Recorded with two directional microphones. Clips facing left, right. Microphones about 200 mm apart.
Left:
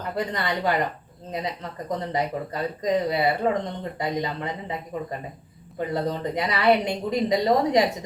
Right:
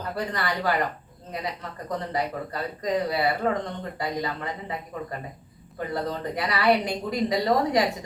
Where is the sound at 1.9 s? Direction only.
20° left (ahead or behind).